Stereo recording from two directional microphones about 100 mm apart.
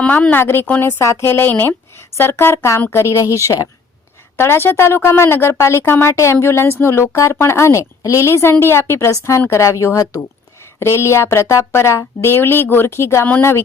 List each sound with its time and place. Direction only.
0.0 s a woman's voice: 15° left (ahead or behind)